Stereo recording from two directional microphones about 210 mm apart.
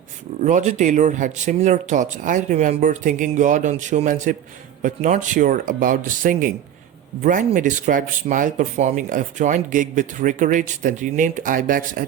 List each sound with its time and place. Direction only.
0.4 s speech: 35° right (ahead or behind)